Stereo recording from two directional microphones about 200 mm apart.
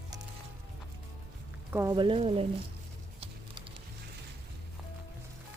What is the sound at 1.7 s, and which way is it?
Speech, 15° right (ahead or behind).